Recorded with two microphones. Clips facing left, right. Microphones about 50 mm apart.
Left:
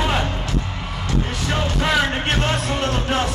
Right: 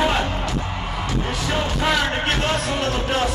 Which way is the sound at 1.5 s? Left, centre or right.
Centre.